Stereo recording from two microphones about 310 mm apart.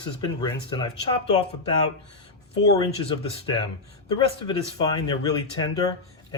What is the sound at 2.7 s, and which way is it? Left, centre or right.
Speech, centre.